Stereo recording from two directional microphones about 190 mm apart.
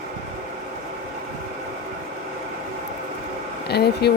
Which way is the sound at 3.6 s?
60° left (ahead or behind).